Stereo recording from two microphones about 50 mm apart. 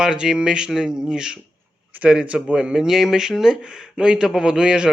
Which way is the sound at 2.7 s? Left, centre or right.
Centre.